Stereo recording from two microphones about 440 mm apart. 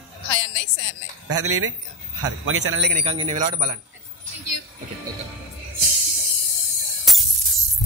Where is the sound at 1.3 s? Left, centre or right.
Right.